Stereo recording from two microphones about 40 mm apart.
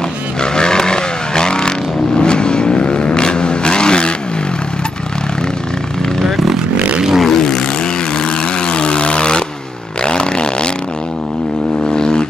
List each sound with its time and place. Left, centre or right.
0.4 s vehicle: centre
7.2 s vehicle: centre
8.6 s aircraft: left
10.0 s a sound: left
11.9 s vehicle: left